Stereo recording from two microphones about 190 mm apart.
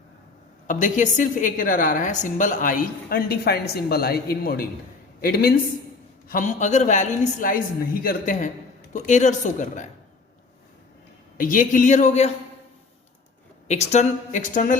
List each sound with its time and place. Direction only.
0.7 s a woman's voice: 40° left (ahead or behind)
11.3 s a woman's voice: 45° left (ahead or behind)
13.7 s a woman's voice: 35° left (ahead or behind)